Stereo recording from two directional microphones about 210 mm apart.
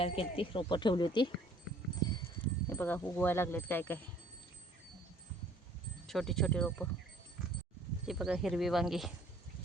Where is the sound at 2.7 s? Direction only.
10° left (ahead or behind).